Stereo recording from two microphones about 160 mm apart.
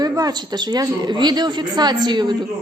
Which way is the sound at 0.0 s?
25° right (ahead or behind).